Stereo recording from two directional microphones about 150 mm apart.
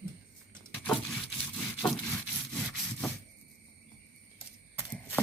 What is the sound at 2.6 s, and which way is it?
Sawing, 10° left (ahead or behind).